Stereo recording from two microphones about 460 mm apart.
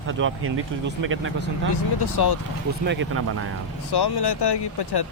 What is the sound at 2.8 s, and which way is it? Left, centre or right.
Speech, right.